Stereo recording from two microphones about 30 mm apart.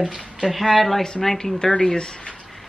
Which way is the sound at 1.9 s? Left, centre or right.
Left.